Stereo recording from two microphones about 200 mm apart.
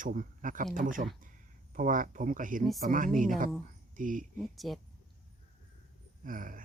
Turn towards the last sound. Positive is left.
turn(degrees=-40)  # may be behind; listen again after turning